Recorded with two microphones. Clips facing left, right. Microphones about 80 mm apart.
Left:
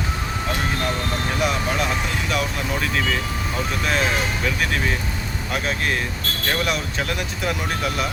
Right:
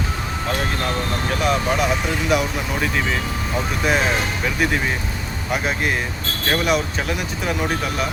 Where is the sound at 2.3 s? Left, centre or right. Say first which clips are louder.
Right 4 dB; centre.